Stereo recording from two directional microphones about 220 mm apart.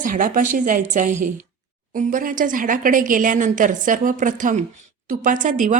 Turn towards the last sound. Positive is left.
turn(degrees=-35)  # may be behind; listen again after turning